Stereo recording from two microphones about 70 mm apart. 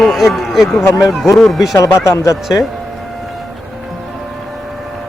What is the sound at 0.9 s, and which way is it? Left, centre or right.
Speech, centre.